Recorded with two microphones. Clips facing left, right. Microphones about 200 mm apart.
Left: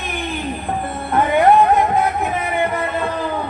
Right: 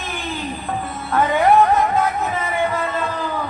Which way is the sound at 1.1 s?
20° left (ahead or behind).